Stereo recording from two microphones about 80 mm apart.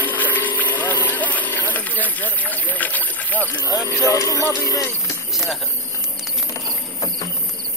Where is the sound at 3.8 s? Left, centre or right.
Left.